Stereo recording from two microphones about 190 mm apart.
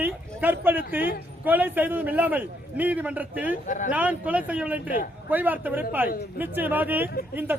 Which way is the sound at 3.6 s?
40° left (ahead or behind).